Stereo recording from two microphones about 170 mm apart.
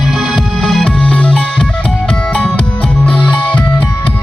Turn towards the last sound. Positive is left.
turn(degrees=10)  # may be behind; listen again after turning